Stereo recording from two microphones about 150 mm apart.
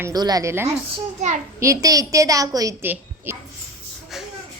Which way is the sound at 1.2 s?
60° right (ahead or behind).